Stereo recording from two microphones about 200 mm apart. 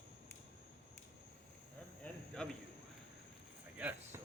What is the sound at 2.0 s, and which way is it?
Cricket, 5° left (ahead or behind).